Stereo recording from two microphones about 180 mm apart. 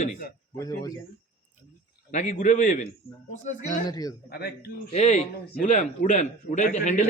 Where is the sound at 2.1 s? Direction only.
45° left (ahead or behind).